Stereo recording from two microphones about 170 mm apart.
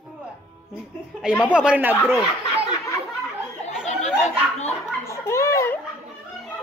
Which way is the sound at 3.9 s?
40° left (ahead or behind).